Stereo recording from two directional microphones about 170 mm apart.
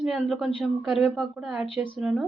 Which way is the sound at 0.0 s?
5° right (ahead or behind).